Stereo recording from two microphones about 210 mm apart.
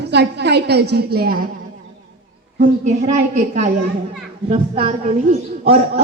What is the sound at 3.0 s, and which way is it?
Speech, 35° right (ahead or behind).